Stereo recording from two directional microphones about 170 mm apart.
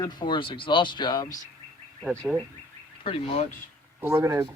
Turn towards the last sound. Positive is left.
turn(degrees=-20)  # may be behind; listen again after turning